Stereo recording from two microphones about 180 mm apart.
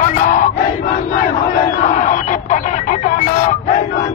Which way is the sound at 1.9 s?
45° left (ahead or behind).